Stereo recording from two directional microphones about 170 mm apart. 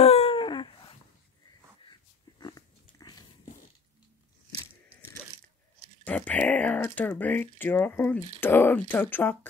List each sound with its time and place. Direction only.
0.0 s a sound: 35° left (ahead or behind)
2.4 s biting: 25° left (ahead or behind)
6.0 s speech: 10° left (ahead or behind)